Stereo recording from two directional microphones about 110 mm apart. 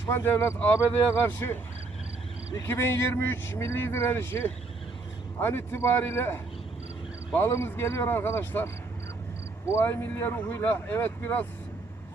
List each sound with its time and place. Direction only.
0.1 s speech: 25° left (ahead or behind)
9.7 s speech: 20° left (ahead or behind)